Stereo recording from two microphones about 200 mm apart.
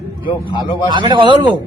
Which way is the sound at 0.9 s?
25° right (ahead or behind).